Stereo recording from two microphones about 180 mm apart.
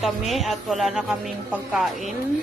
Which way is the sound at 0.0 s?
Centre (ahead or behind).